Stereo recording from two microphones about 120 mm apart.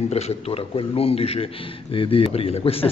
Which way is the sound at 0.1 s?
55° left (ahead or behind).